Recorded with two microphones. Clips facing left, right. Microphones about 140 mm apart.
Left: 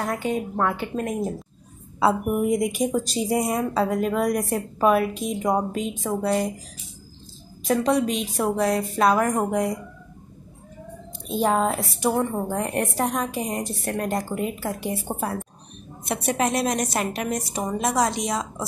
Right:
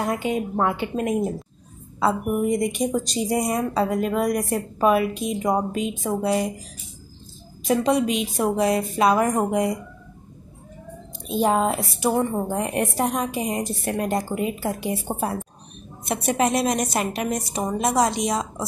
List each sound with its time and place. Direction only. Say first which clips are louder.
0.0 s a woman's voice: right 2 dB; 20° right (ahead or behind)
2.0 s a woman's voice: left 1 dB; 5° left (ahead or behind)
7.6 s a woman's voice: right 1 dB; 15° right (ahead or behind)
11.2 s a woman's voice: right 1 dB; 15° right (ahead or behind)
17.8 s a woman's voice: right 2 dB; 15° right (ahead or behind)